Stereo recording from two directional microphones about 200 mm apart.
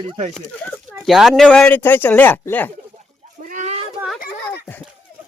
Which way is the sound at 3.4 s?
40° right (ahead or behind).